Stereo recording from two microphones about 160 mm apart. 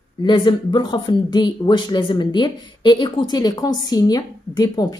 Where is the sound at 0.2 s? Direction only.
30° left (ahead or behind).